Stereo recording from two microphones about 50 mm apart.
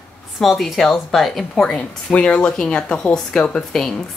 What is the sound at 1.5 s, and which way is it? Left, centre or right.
Speech, centre.